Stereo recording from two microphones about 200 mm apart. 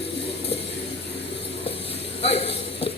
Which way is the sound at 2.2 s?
30° left (ahead or behind).